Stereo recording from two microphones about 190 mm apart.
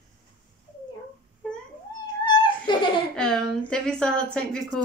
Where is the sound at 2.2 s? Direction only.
25° left (ahead or behind).